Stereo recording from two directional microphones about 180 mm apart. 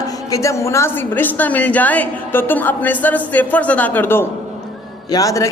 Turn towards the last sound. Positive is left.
turn(degrees=20)  # may be behind; listen again after turning